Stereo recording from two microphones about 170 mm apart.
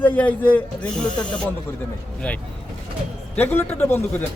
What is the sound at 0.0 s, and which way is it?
Speech, 10° left (ahead or behind).